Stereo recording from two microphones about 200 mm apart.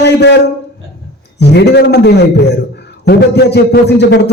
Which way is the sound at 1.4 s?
55° left (ahead or behind).